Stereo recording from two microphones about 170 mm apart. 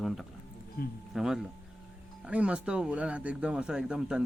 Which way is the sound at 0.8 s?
65° left (ahead or behind).